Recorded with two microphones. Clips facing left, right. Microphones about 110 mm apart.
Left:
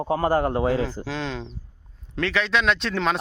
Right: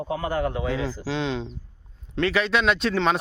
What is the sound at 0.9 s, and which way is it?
A man's voice, centre (ahead or behind).